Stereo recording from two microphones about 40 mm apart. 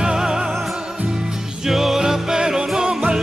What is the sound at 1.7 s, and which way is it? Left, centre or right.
Music, centre.